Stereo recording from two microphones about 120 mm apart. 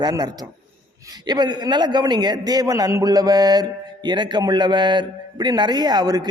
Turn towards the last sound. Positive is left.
turn(degrees=-35)  # may be behind; listen again after turning